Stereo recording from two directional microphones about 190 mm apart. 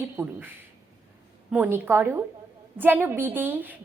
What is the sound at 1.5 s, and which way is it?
A woman's voice, 10° right (ahead or behind).